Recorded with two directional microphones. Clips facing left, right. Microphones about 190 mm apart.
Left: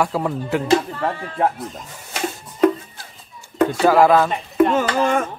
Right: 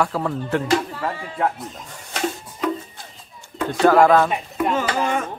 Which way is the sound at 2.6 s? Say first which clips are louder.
Left 8 dB; 55° left (ahead or behind).